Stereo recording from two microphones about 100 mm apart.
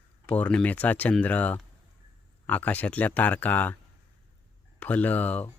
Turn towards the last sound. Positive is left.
turn(degrees=15)  # may be behind; listen again after turning